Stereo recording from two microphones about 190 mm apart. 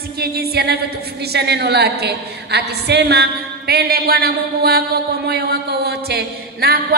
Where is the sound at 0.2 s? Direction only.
55° right (ahead or behind).